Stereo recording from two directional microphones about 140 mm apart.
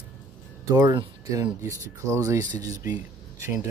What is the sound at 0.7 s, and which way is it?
Speech, 30° right (ahead or behind).